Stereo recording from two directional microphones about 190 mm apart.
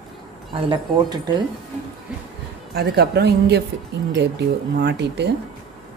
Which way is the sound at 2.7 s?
55° right (ahead or behind).